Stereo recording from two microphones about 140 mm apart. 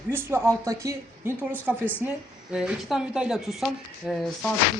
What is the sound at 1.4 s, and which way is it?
Speech, 10° right (ahead or behind).